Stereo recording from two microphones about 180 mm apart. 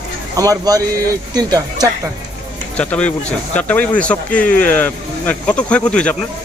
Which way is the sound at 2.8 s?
5° left (ahead or behind).